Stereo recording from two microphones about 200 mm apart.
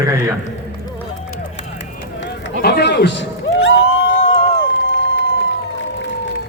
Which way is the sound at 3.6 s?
80° left.